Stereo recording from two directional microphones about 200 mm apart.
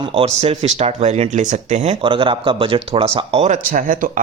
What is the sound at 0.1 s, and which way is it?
Speech, 30° right (ahead or behind).